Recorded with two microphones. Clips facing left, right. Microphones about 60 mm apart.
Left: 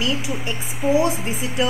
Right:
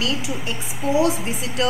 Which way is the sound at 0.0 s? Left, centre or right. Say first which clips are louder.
Left 1 dB; centre.